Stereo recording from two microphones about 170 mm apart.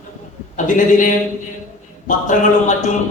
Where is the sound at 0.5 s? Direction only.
50° left (ahead or behind).